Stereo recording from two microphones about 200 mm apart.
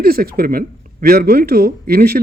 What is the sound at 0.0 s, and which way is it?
Speech, 50° right (ahead or behind).